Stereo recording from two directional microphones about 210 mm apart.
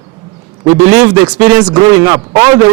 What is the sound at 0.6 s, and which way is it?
Speech, 20° right (ahead or behind).